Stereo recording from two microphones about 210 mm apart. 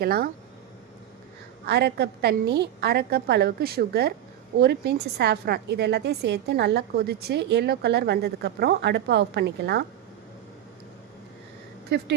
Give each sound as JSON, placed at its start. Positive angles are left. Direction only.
{"t": 0.0, "sound": "a woman's voice", "side_deg": -45}
{"t": 1.6, "sound": "a woman's voice", "side_deg": -50}
{"t": 11.9, "sound": "a woman's voice", "side_deg": -50}